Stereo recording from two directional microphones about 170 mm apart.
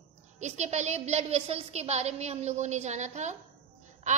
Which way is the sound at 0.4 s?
45° right (ahead or behind).